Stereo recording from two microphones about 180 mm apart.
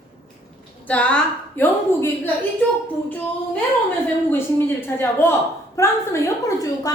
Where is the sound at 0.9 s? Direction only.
5° left (ahead or behind).